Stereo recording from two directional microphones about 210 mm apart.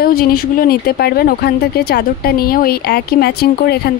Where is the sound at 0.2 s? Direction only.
45° left (ahead or behind).